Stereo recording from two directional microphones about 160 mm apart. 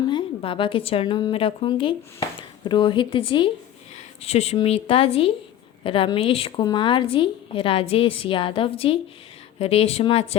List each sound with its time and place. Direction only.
0.1 s a woman's voice: 30° left (ahead or behind)